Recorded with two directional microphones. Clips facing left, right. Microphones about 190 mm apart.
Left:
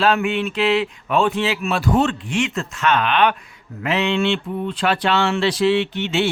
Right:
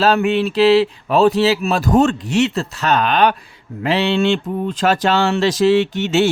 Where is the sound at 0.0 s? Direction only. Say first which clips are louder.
Right 4 dB; 40° right (ahead or behind).